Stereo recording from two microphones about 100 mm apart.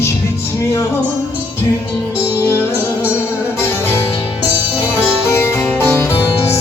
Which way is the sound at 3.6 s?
25° left (ahead or behind).